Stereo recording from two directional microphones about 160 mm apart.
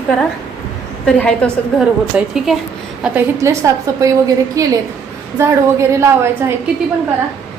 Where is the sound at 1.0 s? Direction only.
5° left (ahead or behind).